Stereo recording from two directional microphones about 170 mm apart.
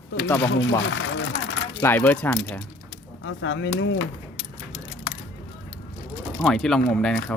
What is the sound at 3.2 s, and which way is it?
Speech, 90° left.